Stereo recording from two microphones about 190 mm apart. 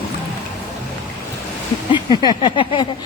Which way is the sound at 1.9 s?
25° left (ahead or behind).